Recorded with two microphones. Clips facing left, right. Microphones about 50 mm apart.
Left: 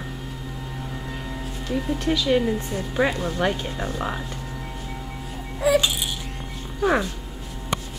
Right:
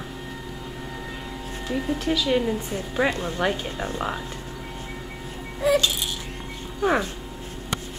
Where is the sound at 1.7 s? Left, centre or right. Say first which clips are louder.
Left 1 dB; centre.